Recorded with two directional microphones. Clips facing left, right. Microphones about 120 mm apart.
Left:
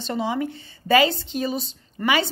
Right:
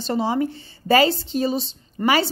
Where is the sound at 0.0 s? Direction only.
35° right (ahead or behind).